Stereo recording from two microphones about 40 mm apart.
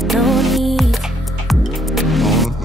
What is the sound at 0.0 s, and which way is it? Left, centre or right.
Music, centre.